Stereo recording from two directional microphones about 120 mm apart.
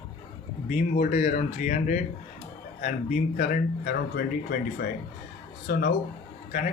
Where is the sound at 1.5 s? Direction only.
85° left.